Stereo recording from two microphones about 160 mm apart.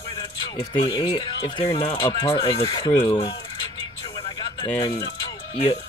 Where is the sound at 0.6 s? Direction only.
35° left (ahead or behind).